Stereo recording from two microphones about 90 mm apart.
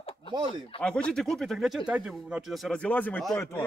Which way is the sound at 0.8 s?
10° left (ahead or behind).